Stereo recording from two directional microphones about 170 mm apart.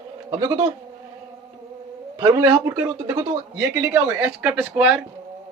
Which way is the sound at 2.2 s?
20° right (ahead or behind).